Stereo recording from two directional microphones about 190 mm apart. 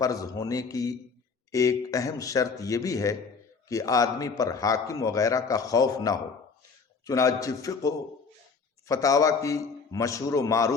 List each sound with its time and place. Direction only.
0.0 s a man's voice: 20° left (ahead or behind)